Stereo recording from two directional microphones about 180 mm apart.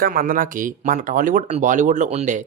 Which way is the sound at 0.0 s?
55° right (ahead or behind).